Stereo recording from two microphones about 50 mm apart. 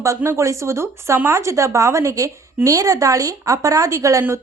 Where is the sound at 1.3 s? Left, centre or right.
Right.